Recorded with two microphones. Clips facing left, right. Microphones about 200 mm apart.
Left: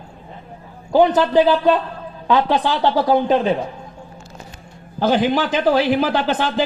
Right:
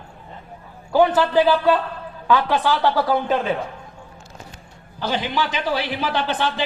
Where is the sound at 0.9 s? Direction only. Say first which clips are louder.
Left 3 dB; 20° left (ahead or behind).